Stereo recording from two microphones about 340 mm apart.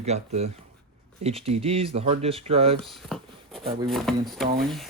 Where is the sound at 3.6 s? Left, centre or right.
Centre.